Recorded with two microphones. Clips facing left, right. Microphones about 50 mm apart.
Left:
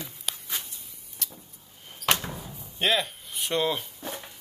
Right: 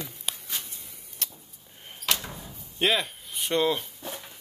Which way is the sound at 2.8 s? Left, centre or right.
Centre.